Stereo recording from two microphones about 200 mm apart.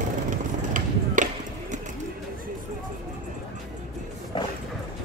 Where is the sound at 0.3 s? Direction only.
40° right (ahead or behind).